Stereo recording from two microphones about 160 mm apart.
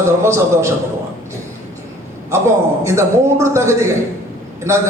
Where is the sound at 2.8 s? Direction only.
15° right (ahead or behind).